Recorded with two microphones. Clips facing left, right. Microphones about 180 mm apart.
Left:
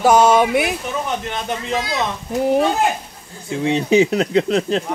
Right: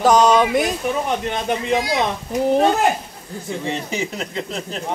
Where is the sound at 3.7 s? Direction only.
70° left (ahead or behind).